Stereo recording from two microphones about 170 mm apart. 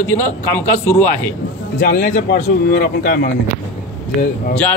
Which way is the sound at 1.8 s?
50° left (ahead or behind).